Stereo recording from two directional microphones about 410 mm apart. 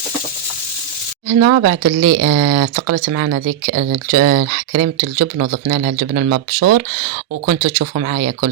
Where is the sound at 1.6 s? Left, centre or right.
Right.